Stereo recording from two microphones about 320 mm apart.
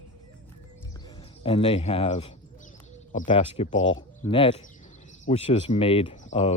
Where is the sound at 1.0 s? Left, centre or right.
Centre.